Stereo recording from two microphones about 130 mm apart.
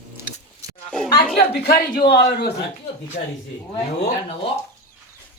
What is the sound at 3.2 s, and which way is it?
Speech, 90° left.